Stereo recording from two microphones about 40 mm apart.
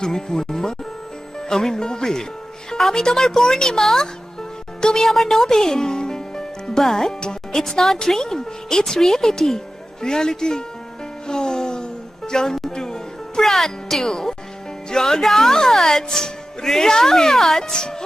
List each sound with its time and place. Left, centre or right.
0.0 s speech: centre
11.3 s a sound: centre
12.7 s music: centre
13.4 s speech: centre